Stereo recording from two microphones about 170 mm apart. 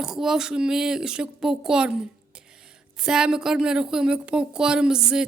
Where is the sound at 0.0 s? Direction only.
Centre (ahead or behind).